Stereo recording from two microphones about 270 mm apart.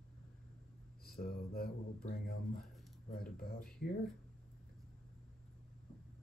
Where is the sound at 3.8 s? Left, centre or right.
Left.